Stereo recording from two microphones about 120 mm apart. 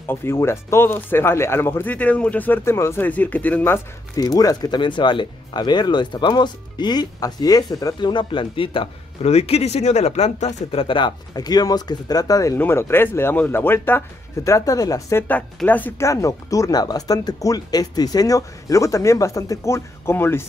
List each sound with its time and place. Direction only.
0.1 s speech: 20° left (ahead or behind)
4.2 s speech: 30° left (ahead or behind)
9.2 s speech: 60° left (ahead or behind); by 15.2 s 25° left (ahead or behind)
15.2 s speech: 15° left (ahead or behind)
16.1 s speech: 25° left (ahead or behind)